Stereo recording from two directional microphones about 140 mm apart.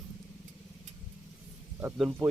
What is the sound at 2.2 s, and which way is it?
Speech, 30° right (ahead or behind).